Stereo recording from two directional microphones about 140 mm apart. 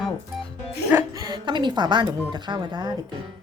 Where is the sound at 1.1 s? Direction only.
30° right (ahead or behind).